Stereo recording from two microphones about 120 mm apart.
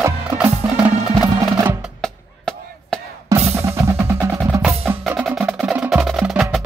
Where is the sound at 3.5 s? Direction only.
25° right (ahead or behind).